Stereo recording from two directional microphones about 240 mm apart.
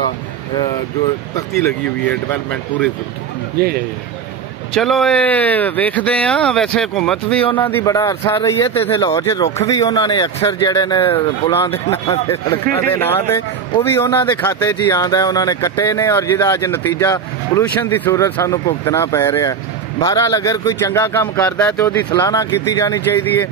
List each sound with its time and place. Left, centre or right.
1.3 s speech: centre
4.7 s speech: centre